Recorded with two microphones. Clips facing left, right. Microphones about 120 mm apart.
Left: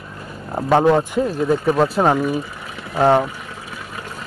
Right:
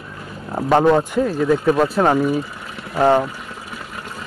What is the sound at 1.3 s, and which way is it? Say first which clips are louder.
Speech: right 1 dB; 20° left (ahead or behind).